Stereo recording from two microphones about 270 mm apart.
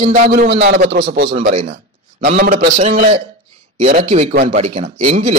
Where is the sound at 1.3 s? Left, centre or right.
Right.